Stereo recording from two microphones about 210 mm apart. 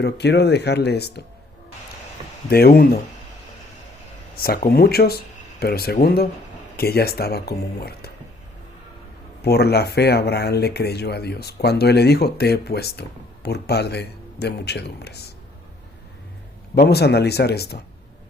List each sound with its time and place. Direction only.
0.0 s speech: 50° left (ahead or behind)
2.5 s speech: 45° left (ahead or behind)
4.4 s speech: 45° left (ahead or behind)
9.4 s speech: 50° left (ahead or behind)
16.9 s speech: 50° left (ahead or behind)